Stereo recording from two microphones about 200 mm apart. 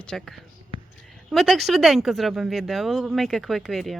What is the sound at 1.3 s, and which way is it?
A woman's voice, centre (ahead or behind).